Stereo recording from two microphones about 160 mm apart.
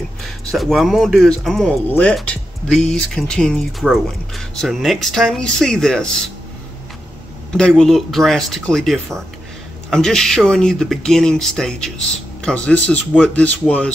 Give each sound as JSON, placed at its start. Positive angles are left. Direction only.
{"t": 0.2, "sound": "speech", "side_deg": 0}
{"t": 7.5, "sound": "speech", "side_deg": 5}